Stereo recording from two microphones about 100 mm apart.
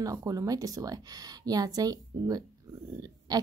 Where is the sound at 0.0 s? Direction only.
35° right (ahead or behind).